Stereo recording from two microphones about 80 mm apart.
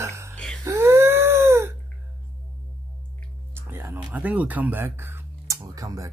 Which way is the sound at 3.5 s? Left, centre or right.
Right.